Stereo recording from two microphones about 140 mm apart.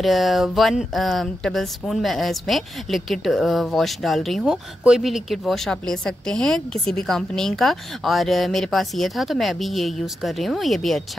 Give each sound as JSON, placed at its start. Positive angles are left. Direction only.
{"t": 0.0, "sound": "a woman's voice", "side_deg": 0}